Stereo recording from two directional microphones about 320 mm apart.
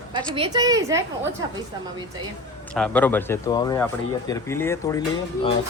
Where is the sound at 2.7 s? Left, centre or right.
Centre.